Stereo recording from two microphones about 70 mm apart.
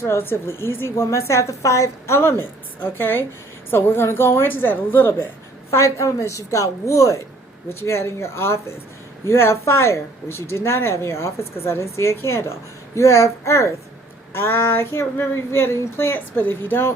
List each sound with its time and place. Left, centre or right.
0.0 s speech: left
5.7 s a woman's voice: left